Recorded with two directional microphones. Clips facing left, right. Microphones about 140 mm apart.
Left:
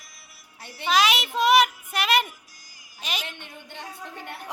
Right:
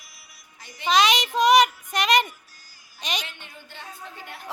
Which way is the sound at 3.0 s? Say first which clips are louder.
Right 2 dB; 5° left (ahead or behind).